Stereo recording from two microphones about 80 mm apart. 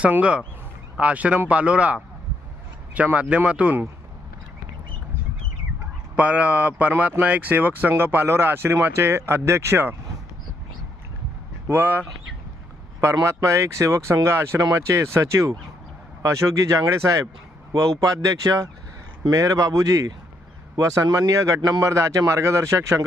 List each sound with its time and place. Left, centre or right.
0.0 s speech: centre
6.1 s speech: centre
11.7 s speech: right
13.2 s speech: right